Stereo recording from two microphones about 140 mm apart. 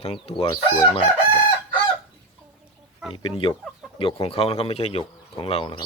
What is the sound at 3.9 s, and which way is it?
Speech, 40° left (ahead or behind).